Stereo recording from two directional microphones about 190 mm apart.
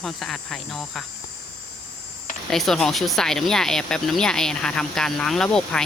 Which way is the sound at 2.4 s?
Centre (ahead or behind).